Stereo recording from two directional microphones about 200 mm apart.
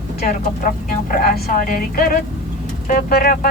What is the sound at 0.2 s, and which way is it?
Speech, 45° left (ahead or behind).